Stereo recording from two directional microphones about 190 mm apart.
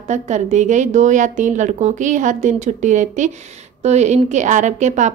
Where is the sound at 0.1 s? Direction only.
40° right (ahead or behind).